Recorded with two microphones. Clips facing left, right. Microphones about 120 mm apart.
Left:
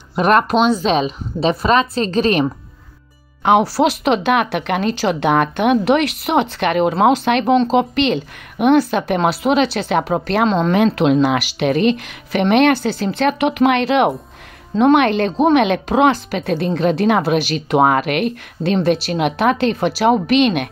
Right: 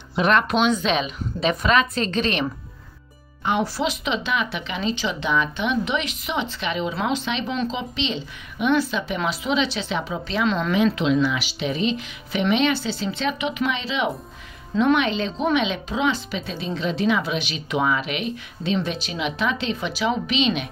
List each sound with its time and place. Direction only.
0.1 s a woman's voice: 45° left (ahead or behind)
3.7 s speech: 70° left (ahead or behind)
10.4 s a woman's voice: 35° left (ahead or behind)
11.0 s speech: 55° left (ahead or behind)